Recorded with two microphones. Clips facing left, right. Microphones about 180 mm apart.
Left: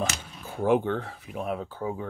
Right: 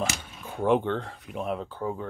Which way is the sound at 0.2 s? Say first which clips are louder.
Even; 5° left (ahead or behind).